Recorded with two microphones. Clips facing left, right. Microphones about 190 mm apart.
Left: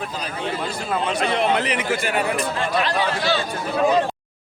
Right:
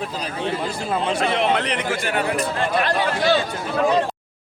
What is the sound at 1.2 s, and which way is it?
Speech, centre (ahead or behind).